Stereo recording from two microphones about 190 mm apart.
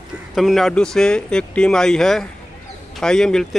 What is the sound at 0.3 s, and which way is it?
Speech, centre (ahead or behind).